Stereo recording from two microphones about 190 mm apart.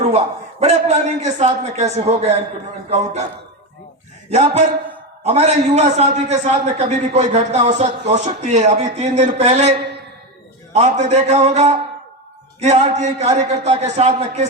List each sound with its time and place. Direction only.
0.0 s a man's voice: 30° right (ahead or behind)
4.3 s a man's voice: 35° right (ahead or behind)
11.1 s a man's voice: 35° right (ahead or behind)